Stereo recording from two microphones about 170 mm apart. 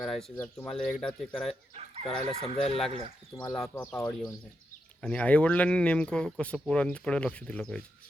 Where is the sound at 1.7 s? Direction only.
40° right (ahead or behind).